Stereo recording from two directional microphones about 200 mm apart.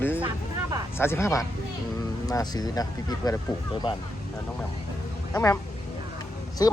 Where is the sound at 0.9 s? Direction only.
10° left (ahead or behind).